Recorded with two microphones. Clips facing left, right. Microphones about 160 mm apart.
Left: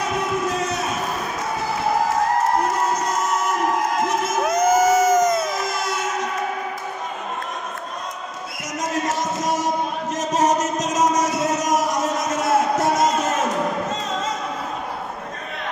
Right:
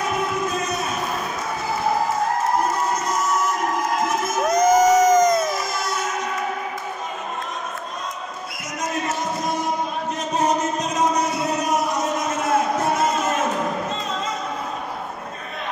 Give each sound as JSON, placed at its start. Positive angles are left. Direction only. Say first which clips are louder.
{"t": 4.5, "sound": "crowd", "louder": "right 2 dB", "side_deg": 5}
{"t": 10.3, "sound": "music", "louder": "left 2 dB", "side_deg": 85}